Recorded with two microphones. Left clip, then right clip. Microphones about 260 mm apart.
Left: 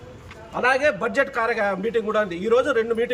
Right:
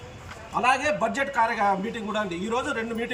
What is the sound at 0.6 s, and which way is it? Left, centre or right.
A man's voice, centre.